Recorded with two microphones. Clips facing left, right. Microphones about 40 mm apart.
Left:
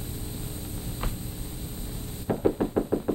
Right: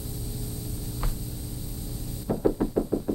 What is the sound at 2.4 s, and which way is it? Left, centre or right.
Knock, centre.